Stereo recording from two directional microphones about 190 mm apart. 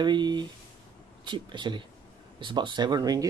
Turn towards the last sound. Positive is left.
turn(degrees=-20)  # may be behind; listen again after turning